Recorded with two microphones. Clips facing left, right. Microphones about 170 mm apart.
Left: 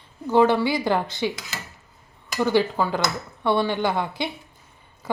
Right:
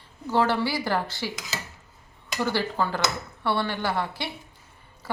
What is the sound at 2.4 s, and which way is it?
A woman's voice, 15° left (ahead or behind).